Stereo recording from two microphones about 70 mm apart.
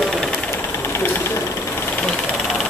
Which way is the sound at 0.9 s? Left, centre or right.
Left.